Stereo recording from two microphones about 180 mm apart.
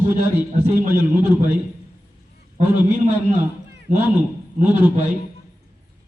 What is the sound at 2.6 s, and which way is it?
Speech, 10° right (ahead or behind).